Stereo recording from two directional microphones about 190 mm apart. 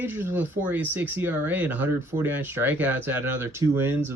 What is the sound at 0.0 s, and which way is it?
Speech, 10° right (ahead or behind).